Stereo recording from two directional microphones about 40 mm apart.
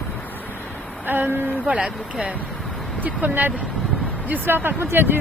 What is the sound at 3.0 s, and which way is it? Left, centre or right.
Speech, right.